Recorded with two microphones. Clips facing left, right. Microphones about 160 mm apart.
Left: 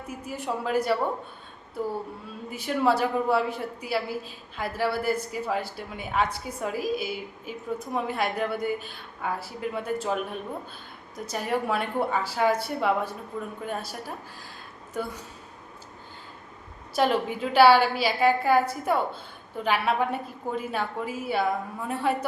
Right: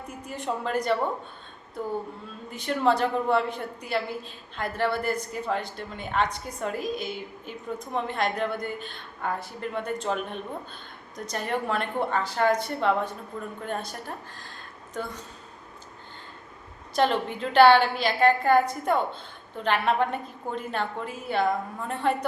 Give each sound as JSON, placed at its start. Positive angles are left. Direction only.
{"t": 0.1, "sound": "a woman's voice", "side_deg": 5}
{"t": 2.5, "sound": "a woman's voice", "side_deg": 5}
{"t": 16.9, "sound": "a woman's voice", "side_deg": 5}